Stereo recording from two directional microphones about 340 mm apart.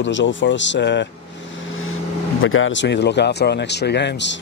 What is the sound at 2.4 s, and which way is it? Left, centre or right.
Speech, left.